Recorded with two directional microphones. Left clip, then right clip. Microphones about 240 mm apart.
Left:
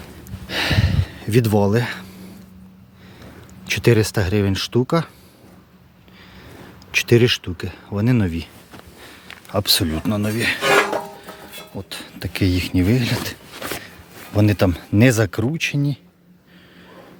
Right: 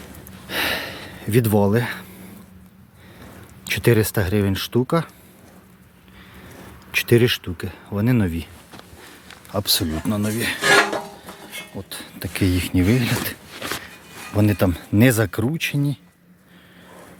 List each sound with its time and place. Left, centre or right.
0.4 s a sound: centre
3.7 s speech: centre
6.9 s speech: centre
9.5 s speech: centre